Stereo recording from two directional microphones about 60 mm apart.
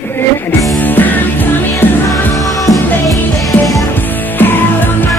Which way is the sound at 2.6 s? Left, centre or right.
Left.